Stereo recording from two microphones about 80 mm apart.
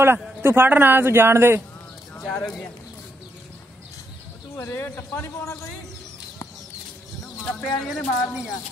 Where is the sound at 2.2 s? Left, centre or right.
Centre.